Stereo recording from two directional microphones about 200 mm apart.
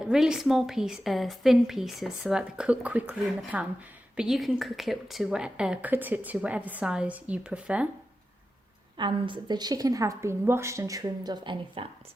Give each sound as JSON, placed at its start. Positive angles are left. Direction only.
{"t": 0.0, "sound": "a woman's voice", "side_deg": -5}
{"t": 9.0, "sound": "a woman's voice", "side_deg": -25}